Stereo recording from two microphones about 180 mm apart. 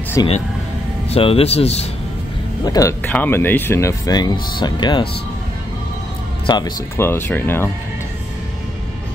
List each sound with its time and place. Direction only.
0.2 s speech: 20° left (ahead or behind)
1.1 s speech: 35° left (ahead or behind)
2.6 s speech: 20° left (ahead or behind)
6.4 s speech: 25° left (ahead or behind)
7.0 s speech: 15° left (ahead or behind)